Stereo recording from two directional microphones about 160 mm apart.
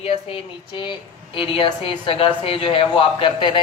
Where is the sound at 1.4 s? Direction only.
35° left (ahead or behind).